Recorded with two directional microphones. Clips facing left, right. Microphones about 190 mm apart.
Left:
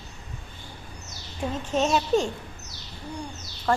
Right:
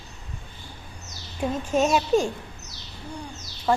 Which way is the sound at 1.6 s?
10° right (ahead or behind).